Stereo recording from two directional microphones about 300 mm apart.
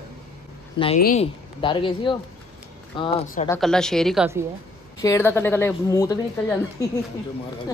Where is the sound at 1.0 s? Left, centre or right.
Left.